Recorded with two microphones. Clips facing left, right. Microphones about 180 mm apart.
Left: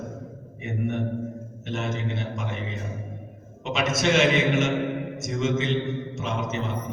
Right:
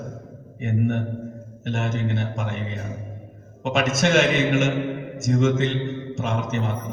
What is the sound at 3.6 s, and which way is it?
Mantra, 50° right (ahead or behind).